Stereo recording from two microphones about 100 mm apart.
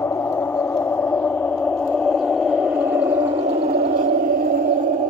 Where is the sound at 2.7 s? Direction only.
15° right (ahead or behind).